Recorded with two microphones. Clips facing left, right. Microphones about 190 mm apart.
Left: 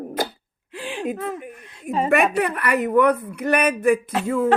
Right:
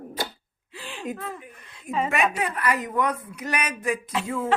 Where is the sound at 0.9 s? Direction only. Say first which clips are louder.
Left 6 dB; 80° left.